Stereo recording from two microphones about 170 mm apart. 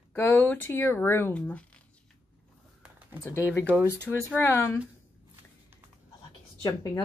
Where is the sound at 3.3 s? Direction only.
15° left (ahead or behind).